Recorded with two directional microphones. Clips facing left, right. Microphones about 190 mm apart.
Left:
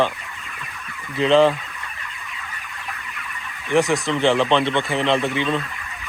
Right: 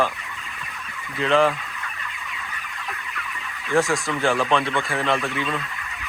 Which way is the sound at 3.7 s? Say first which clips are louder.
Left 3 dB; 20° left (ahead or behind).